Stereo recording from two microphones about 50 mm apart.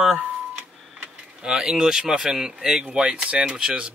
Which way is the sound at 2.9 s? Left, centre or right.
Right.